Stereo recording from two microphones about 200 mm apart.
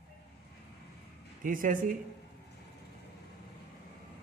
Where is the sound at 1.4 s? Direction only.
40° right (ahead or behind).